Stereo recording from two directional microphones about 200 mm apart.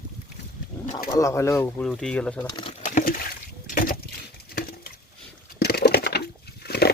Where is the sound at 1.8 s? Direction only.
Centre (ahead or behind).